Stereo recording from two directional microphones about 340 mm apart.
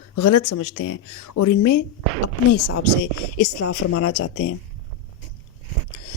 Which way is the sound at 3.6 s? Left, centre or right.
Left.